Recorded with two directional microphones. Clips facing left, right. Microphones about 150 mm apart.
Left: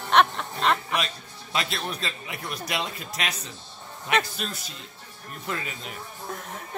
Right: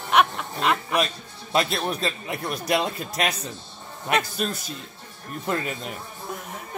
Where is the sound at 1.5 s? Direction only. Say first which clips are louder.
Right 6 dB; 45° right (ahead or behind).